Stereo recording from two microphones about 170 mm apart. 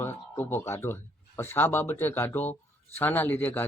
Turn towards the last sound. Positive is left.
turn(degrees=10)  # may be behind; listen again after turning